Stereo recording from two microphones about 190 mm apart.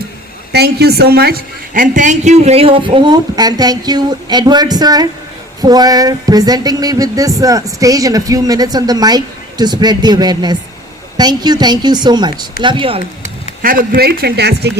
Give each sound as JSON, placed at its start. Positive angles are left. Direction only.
{"t": 0.5, "sound": "speech", "side_deg": -60}
{"t": 13.6, "sound": "speech", "side_deg": -50}